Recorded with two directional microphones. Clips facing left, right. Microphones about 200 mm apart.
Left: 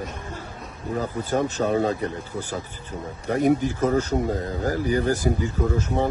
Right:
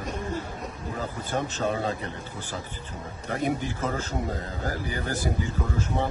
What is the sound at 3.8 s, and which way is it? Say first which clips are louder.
A man's voice: left 8 dB; 40° left (ahead or behind).